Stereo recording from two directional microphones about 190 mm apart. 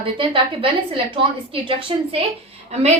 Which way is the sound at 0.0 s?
30° right (ahead or behind).